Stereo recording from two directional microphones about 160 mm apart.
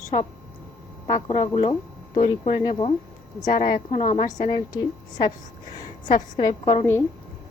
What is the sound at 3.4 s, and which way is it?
Speech, 50° left (ahead or behind).